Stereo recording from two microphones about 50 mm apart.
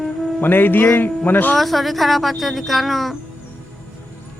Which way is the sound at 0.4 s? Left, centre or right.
Left.